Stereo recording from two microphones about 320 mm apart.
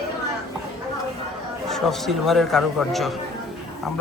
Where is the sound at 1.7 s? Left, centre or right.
Centre.